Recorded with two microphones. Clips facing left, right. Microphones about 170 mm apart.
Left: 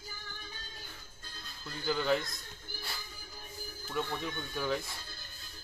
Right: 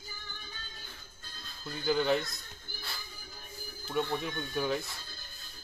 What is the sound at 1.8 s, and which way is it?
Speech, 20° right (ahead or behind).